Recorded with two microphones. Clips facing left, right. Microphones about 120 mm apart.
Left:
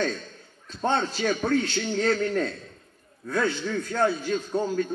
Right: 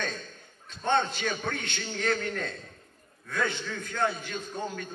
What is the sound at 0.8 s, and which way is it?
Speech, 40° left (ahead or behind).